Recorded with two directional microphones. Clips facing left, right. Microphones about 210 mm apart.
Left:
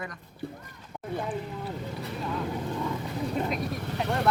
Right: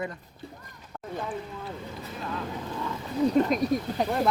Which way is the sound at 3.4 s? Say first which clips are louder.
Right 7 dB; 40° right (ahead or behind).